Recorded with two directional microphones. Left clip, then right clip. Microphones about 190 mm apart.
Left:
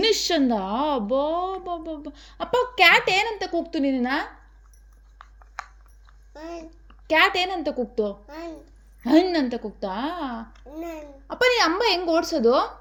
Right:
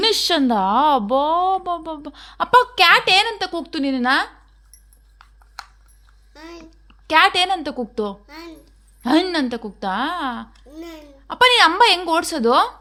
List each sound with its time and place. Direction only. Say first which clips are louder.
0.0 s speech: right 3 dB; 50° right (ahead or behind)
5.6 s a sound: even; 5° left (ahead or behind)
6.3 s a child's voice: left 2 dB; 20° right (ahead or behind)
6.6 s a woman's voice: left 2 dB; 50° right (ahead or behind)
8.3 s a child's voice: left 1 dB; 20° right (ahead or behind)
9.0 s speech: right 1 dB; 50° right (ahead or behind)
10.7 s a child's voice: left 2 dB; 25° right (ahead or behind)
11.3 s speech: right 7 dB; 50° right (ahead or behind)